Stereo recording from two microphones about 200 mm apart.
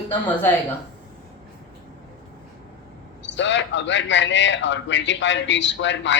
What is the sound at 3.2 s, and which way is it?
A man's voice, 65° left (ahead or behind).